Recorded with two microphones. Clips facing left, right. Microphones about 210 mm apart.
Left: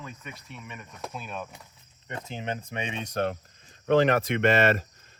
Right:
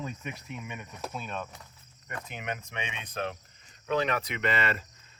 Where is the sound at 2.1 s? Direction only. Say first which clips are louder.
Left 4 dB; 25° left (ahead or behind).